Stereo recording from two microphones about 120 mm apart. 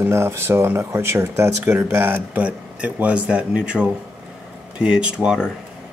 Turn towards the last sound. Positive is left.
turn(degrees=-5)  # may be behind; listen again after turning